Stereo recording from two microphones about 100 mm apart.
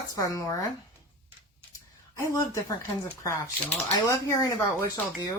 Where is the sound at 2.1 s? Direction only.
35° left (ahead or behind).